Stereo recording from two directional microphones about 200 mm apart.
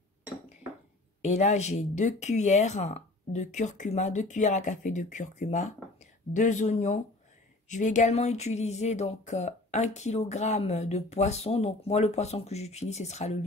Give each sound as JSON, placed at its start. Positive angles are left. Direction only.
{"t": 1.2, "sound": "speech", "side_deg": 35}